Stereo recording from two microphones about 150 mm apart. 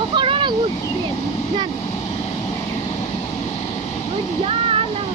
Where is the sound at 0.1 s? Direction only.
35° right (ahead or behind).